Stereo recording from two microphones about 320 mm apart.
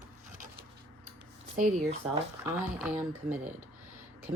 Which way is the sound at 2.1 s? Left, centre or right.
Centre.